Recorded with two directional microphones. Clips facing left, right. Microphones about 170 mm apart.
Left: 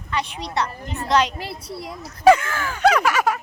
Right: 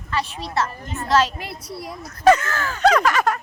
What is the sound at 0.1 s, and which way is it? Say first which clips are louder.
Speech: even; 20° left (ahead or behind).